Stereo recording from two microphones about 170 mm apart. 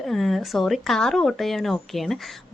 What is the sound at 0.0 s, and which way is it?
Speech, centre (ahead or behind).